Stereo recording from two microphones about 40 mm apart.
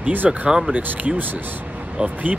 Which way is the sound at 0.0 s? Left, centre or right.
Right.